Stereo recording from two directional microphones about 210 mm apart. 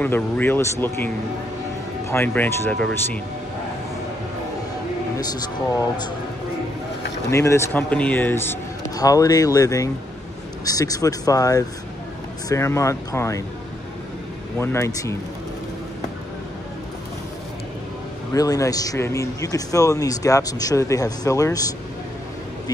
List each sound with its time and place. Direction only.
0.0 s a man's voice: 10° left (ahead or behind)
5.1 s a sound: 20° left (ahead or behind)
7.2 s a man's voice: 15° left (ahead or behind)
14.6 s a man's voice: 15° left (ahead or behind)
18.3 s a man's voice: 15° left (ahead or behind)